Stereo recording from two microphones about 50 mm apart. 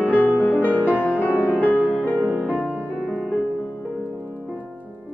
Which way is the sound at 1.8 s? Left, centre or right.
Right.